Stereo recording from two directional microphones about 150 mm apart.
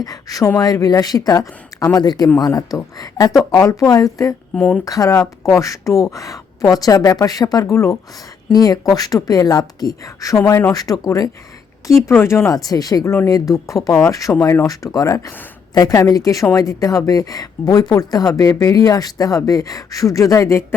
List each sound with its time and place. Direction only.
0.0 s a woman's voice: 25° left (ahead or behind)
4.5 s speech: 10° left (ahead or behind)
4.9 s a woman's voice: 20° left (ahead or behind)